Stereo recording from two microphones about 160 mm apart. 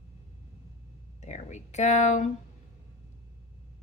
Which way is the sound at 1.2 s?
45° left (ahead or behind).